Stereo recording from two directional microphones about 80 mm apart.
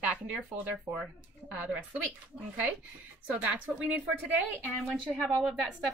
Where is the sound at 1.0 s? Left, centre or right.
Centre.